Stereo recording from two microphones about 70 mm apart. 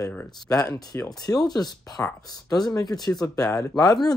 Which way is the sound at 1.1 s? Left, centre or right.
Left.